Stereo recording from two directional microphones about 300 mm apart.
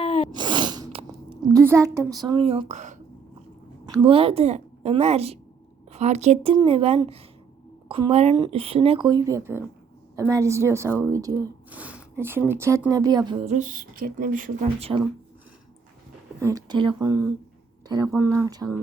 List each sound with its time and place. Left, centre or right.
0.0 s sneeze: centre
0.3 s a sound: centre
3.8 s a woman's voice: centre
16.4 s speech: centre